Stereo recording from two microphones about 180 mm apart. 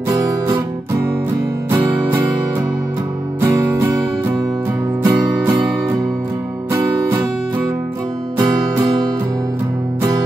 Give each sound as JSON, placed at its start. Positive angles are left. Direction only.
{"t": 0.1, "sound": "guitar", "side_deg": -20}
{"t": 1.7, "sound": "music", "side_deg": -10}
{"t": 3.3, "sound": "music", "side_deg": -15}